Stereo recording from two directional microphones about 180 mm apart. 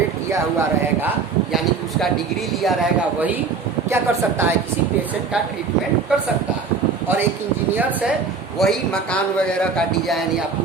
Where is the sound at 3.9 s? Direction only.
15° right (ahead or behind).